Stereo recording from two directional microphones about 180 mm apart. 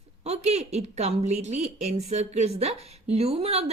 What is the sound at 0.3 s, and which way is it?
A woman's voice, 35° right (ahead or behind).